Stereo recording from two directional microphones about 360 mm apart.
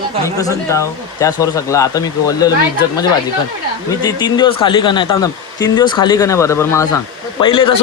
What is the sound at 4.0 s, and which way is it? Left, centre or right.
Speech, centre.